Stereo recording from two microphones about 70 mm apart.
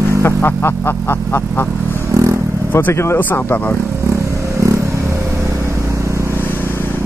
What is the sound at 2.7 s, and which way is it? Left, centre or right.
Speech, left.